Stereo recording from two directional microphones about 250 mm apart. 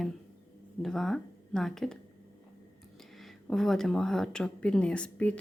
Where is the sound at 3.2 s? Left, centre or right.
Centre.